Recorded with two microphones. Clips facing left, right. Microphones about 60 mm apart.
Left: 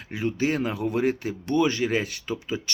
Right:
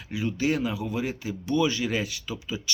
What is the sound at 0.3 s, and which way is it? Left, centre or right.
Speech, left.